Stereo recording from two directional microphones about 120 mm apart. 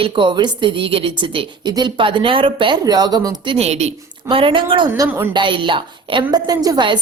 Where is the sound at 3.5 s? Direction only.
65° right (ahead or behind).